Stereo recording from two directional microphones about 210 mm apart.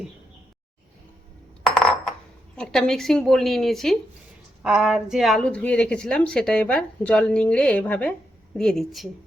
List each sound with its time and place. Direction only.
2.6 s a woman's voice: centre (ahead or behind)